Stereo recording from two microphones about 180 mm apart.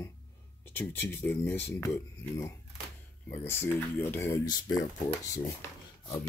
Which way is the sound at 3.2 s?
15° left (ahead or behind).